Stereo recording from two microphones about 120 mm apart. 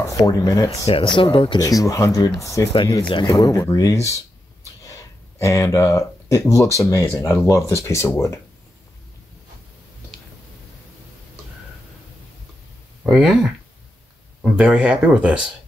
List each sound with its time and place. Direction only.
0.1 s speech: 30° left (ahead or behind)
0.7 s speech: 50° left (ahead or behind)
1.6 s speech: 30° left (ahead or behind)
3.0 s speech: 45° left (ahead or behind)
3.3 s speech: 30° left (ahead or behind)
5.4 s speech: 25° left (ahead or behind)
13.0 s speech: 5° right (ahead or behind)
14.6 s speech: 10° right (ahead or behind)